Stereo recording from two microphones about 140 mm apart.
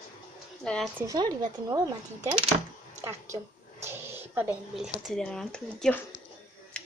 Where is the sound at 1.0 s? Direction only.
25° right (ahead or behind).